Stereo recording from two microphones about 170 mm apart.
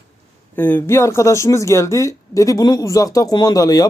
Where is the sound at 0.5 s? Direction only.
10° left (ahead or behind).